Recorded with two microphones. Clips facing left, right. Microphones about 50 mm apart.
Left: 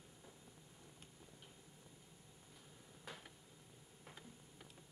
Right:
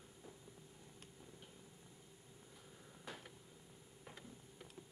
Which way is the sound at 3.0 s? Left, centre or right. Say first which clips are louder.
Right 2 dB; centre.